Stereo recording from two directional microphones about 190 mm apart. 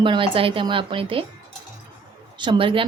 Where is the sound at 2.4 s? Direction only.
25° right (ahead or behind).